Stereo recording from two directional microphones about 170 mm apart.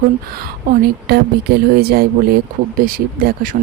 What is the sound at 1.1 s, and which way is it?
Speech, 70° right (ahead or behind).